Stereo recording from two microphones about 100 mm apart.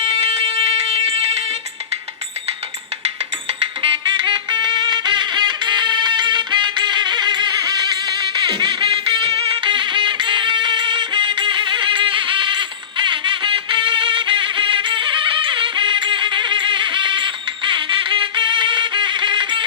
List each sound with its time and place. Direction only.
0.0 s fire alarm: 75° right (ahead or behind)
3.6 s music: 60° right (ahead or behind)